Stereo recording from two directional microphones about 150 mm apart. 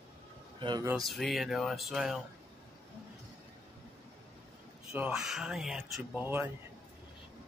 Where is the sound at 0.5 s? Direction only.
30° right (ahead or behind).